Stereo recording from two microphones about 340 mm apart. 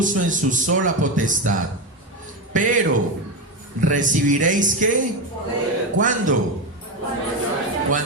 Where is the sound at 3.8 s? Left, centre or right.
Right.